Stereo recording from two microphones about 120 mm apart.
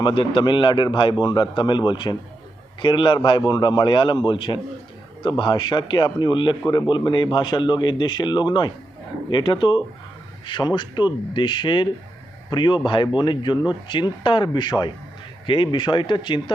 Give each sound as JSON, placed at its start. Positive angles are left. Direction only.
{"t": 0.0, "sound": "a man's voice", "side_deg": 45}